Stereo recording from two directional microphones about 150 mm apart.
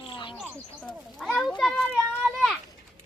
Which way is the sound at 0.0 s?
35° left (ahead or behind).